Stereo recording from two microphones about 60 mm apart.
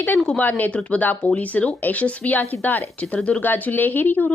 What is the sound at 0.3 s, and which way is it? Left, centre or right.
Speech, left.